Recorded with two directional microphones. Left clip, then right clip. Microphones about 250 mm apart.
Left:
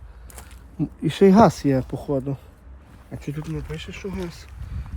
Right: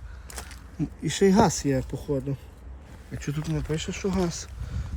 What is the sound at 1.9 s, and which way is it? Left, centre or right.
Speech, left.